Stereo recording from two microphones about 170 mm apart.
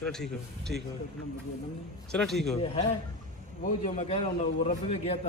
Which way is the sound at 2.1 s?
Centre (ahead or behind).